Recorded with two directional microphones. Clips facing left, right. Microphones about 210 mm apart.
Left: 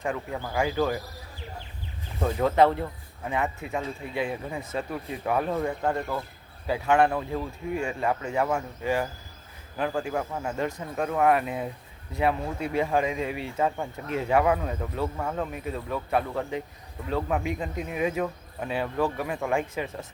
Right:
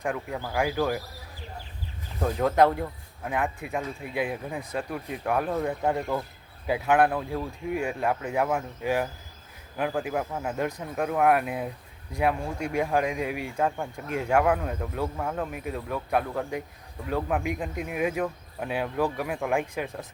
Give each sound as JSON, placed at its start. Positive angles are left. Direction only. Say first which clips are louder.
{"t": 0.0, "sound": "speech", "louder": "even", "side_deg": 0}
{"t": 2.6, "sound": "speech", "louder": "even", "side_deg": -10}